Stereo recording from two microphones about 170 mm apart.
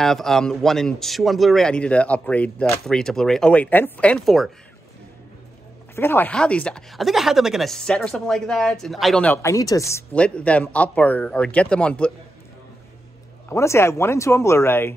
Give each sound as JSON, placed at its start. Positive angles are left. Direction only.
{"t": 0.0, "sound": "a man's voice", "side_deg": 0}
{"t": 5.9, "sound": "speech", "side_deg": 10}
{"t": 13.5, "sound": "speech", "side_deg": 15}